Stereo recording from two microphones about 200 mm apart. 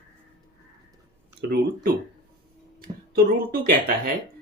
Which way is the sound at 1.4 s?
50° right (ahead or behind).